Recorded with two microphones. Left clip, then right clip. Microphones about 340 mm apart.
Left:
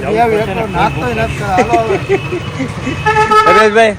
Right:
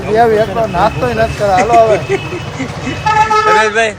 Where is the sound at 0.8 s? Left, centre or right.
Centre.